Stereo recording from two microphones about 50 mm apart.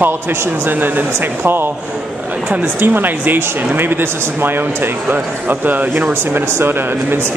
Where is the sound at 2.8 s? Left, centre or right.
Right.